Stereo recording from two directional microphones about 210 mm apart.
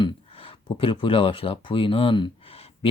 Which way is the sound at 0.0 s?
25° left (ahead or behind).